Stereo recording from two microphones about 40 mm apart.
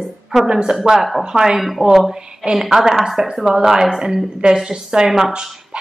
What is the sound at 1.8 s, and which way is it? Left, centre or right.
Speech, right.